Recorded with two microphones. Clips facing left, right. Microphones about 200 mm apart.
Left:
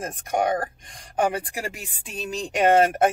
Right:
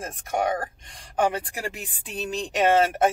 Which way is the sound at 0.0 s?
15° left (ahead or behind).